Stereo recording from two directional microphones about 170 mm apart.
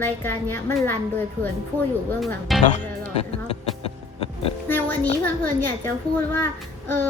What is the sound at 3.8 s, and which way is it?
Music, 35° left (ahead or behind).